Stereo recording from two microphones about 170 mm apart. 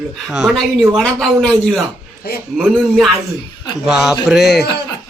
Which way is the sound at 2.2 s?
65° left (ahead or behind).